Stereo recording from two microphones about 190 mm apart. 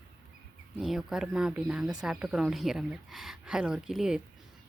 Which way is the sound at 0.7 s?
Centre (ahead or behind).